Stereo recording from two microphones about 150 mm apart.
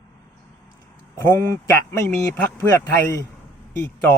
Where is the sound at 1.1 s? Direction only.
15° left (ahead or behind).